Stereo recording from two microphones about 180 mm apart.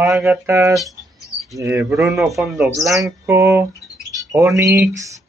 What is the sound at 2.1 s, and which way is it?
Speech, centre (ahead or behind).